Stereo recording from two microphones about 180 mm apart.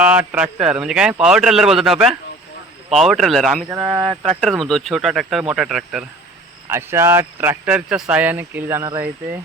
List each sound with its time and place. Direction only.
0.0 s speech: 10° right (ahead or behind)
3.7 s speech: 15° right (ahead or behind)
4.0 s speech: 30° right (ahead or behind)
4.4 s speech: centre (ahead or behind)
6.7 s speech: 15° right (ahead or behind)